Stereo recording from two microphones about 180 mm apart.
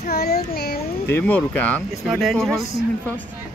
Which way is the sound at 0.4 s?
60° left (ahead or behind).